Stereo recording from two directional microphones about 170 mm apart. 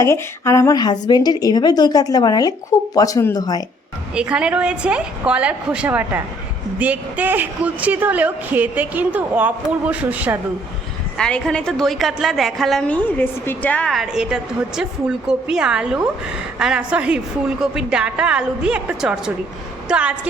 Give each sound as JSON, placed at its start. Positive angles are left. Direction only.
{"t": 0.0, "sound": "speech", "side_deg": 15}
{"t": 4.1, "sound": "a woman's voice", "side_deg": -5}
{"t": 11.2, "sound": "a woman's voice", "side_deg": 5}